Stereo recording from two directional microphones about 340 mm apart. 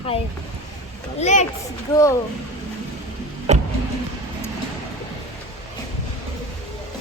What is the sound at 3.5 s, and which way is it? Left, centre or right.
Vehicle, centre.